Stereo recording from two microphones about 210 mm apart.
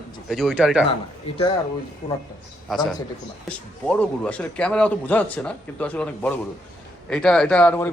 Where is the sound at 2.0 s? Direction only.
45° left (ahead or behind).